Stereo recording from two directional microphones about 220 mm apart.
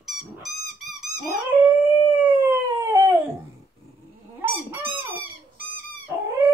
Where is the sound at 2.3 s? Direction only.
10° right (ahead or behind).